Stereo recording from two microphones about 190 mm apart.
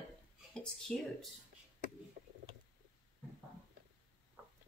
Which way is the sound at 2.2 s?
45° right (ahead or behind).